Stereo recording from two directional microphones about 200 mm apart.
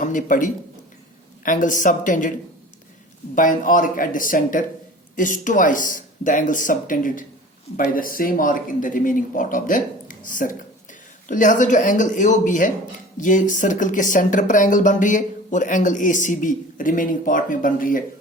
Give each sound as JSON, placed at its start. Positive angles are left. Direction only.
{"t": 0.0, "sound": "speech", "side_deg": 40}
{"t": 3.3, "sound": "speech", "side_deg": 40}